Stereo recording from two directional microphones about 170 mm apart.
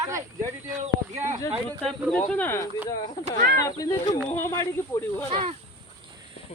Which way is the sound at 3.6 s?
20° left (ahead or behind).